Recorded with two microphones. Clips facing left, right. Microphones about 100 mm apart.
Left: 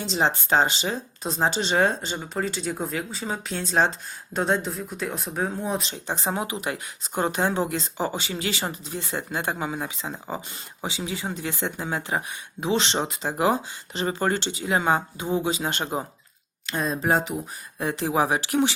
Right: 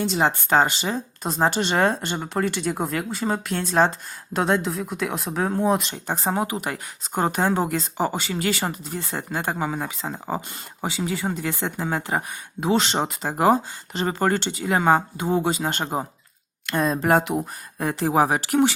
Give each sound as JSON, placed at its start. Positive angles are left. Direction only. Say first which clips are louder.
{"t": 0.0, "sound": "speech", "louder": "right 2 dB", "side_deg": -50}
{"t": 4.4, "sound": "speech", "louder": "right 3 dB", "side_deg": -70}
{"t": 5.9, "sound": "speech", "louder": "right 3 dB", "side_deg": -45}
{"t": 16.6, "sound": "speech", "louder": "right 4 dB", "side_deg": -60}
{"t": 17.7, "sound": "speech", "louder": "right 3 dB", "side_deg": -45}